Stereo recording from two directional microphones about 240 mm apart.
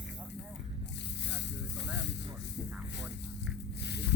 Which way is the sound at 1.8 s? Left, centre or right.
Left.